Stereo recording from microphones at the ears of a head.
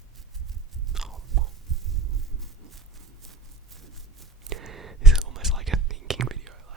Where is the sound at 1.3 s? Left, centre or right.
Right.